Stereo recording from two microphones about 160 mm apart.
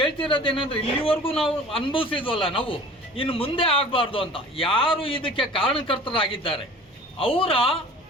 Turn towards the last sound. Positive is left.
turn(degrees=35)  # may be behind; listen again after turning